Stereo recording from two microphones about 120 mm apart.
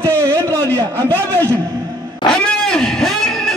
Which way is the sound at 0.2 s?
25° right (ahead or behind).